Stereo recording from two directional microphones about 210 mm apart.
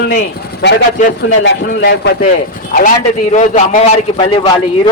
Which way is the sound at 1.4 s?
55° left (ahead or behind).